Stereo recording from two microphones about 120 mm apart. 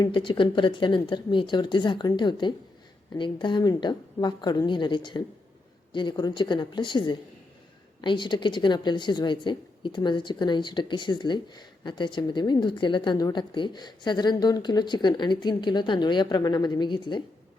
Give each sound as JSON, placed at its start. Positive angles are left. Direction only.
{"t": 0.0, "sound": "a woman's voice", "side_deg": 45}